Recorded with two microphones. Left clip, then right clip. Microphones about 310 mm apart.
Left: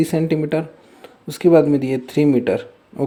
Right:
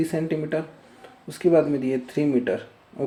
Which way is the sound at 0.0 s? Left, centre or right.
Left.